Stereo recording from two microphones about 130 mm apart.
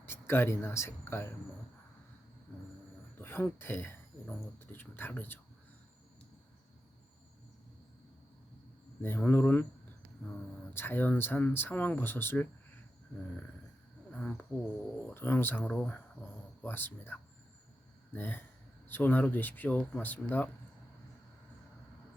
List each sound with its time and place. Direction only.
0.0 s speech: 15° left (ahead or behind)
3.2 s speech: 15° left (ahead or behind)
9.0 s speech: 15° left (ahead or behind)
10.8 s speech: 15° left (ahead or behind)
14.1 s speech: 10° left (ahead or behind)